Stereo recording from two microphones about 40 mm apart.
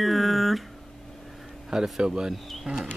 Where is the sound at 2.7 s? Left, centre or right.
Right.